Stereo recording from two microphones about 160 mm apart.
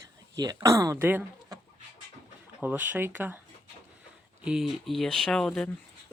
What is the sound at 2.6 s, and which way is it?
Speech, 10° right (ahead or behind).